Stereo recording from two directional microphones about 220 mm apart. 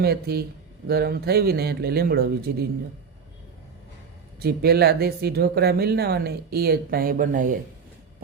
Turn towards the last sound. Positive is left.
turn(degrees=-35)  # may be behind; listen again after turning